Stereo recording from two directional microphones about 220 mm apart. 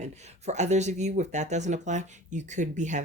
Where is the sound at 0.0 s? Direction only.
30° right (ahead or behind).